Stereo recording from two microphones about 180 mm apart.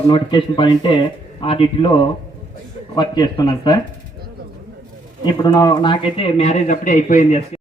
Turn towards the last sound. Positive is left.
turn(degrees=45)  # may be behind; listen again after turning